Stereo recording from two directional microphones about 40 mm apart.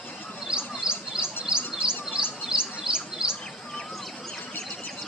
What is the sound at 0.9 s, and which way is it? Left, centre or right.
Bird, centre.